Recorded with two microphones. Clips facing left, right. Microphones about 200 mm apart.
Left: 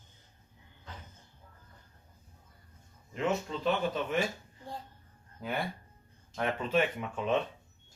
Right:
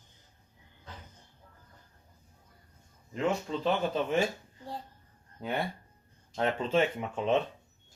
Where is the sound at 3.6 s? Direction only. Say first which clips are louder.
Right 2 dB; 30° right (ahead or behind).